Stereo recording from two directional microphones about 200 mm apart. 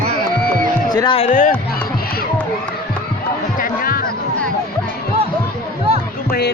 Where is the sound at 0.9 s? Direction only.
25° left (ahead or behind).